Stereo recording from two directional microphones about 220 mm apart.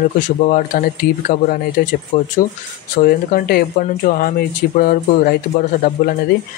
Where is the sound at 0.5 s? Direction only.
40° left (ahead or behind).